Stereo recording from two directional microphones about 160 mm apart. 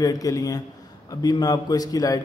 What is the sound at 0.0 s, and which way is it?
A man's voice, 20° left (ahead or behind).